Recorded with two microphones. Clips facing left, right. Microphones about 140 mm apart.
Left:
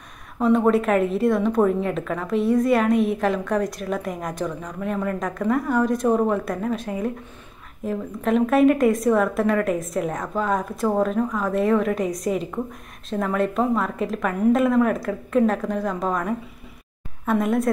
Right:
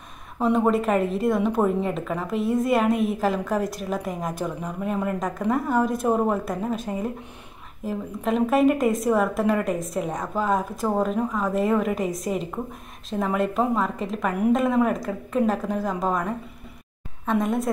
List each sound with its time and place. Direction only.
0.4 s a woman's voice: centre (ahead or behind)